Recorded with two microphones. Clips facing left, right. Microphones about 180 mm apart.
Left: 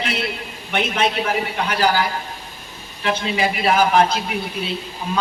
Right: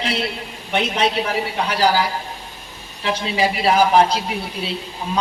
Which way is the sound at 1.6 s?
35° right (ahead or behind).